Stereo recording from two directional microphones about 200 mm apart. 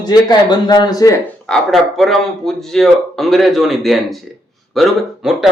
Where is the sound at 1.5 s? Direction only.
Centre (ahead or behind).